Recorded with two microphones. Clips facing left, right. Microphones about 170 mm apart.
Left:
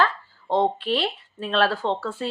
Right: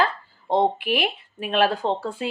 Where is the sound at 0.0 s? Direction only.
10° right (ahead or behind).